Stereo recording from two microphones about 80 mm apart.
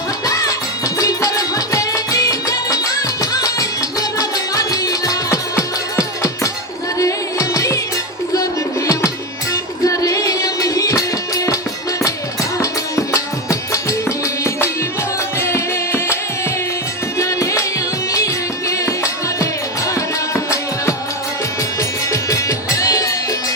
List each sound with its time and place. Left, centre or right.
0.3 s music: left
9.5 s music: left
15.4 s music: left
17.2 s music: left
18.7 s music: left